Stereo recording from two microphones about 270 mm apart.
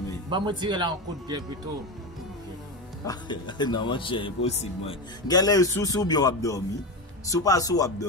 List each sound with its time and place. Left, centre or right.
0.3 s speech: centre
3.1 s speech: centre